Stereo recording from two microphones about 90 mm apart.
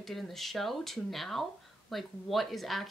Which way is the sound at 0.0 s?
Centre (ahead or behind).